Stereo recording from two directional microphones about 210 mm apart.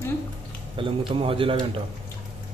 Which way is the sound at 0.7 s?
25° right (ahead or behind).